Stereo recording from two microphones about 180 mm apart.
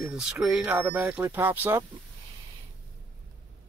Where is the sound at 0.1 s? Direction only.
5° right (ahead or behind).